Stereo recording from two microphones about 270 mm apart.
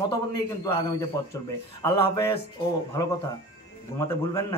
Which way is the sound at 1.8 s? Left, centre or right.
Centre.